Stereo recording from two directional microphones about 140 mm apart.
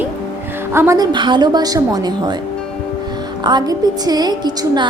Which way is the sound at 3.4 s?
30° right (ahead or behind).